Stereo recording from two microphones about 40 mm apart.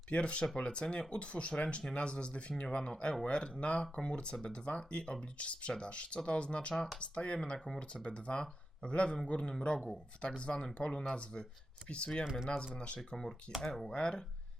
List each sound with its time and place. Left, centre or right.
0.1 s speech: left
12.2 s speech: centre
12.5 s speech: left
13.9 s speech: centre